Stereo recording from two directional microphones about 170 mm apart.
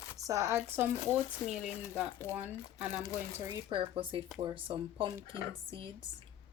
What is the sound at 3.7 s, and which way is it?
Speech, 30° right (ahead or behind).